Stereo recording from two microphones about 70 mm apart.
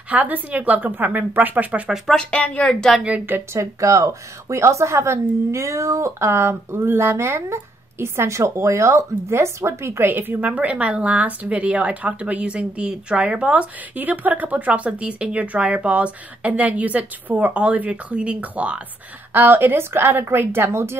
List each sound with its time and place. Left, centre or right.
0.1 s speech: right
2.1 s a woman's voice: centre
3.5 s a woman's voice: right